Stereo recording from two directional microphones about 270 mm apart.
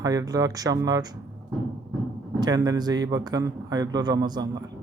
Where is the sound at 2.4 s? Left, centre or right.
Centre.